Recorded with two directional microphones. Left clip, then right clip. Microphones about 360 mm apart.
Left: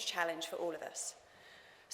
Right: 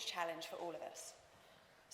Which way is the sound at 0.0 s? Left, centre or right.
Centre.